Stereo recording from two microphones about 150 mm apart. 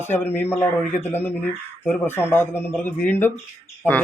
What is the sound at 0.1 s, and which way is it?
Speech, 15° left (ahead or behind).